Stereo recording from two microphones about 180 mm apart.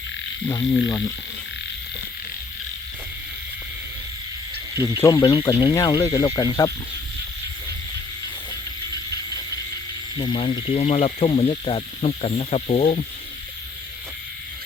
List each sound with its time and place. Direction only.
0.4 s speech: 20° left (ahead or behind)
4.9 s speech: 20° left (ahead or behind)
10.2 s speech: 30° left (ahead or behind)